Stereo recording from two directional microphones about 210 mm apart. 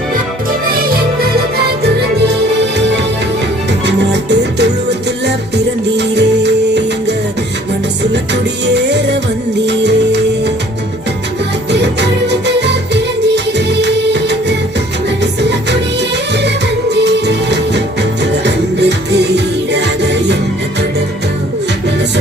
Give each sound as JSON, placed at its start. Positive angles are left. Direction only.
{"t": 3.7, "sound": "music", "side_deg": -55}
{"t": 8.1, "sound": "music", "side_deg": -55}
{"t": 11.7, "sound": "music", "side_deg": -55}